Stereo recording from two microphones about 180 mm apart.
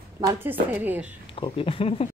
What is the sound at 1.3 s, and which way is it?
Speech, 30° left (ahead or behind).